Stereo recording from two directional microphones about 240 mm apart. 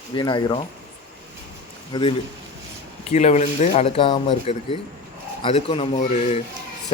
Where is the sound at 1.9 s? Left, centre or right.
Left.